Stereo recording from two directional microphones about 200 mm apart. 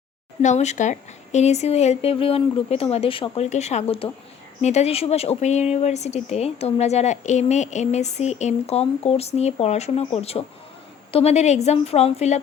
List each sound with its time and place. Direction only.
0.4 s speech: 35° left (ahead or behind)